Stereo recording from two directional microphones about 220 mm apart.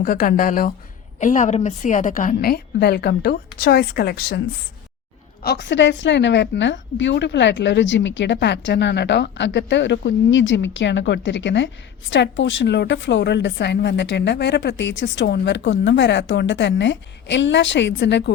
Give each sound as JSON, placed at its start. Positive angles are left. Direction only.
{"t": 0.0, "sound": "a woman's voice", "side_deg": 40}
{"t": 5.4, "sound": "a woman's voice", "side_deg": 50}